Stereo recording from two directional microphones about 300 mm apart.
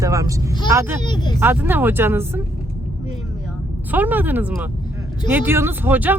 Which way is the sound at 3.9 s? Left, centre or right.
Centre.